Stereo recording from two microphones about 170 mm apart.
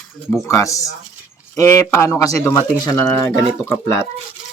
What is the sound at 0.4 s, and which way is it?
Speech, 20° left (ahead or behind).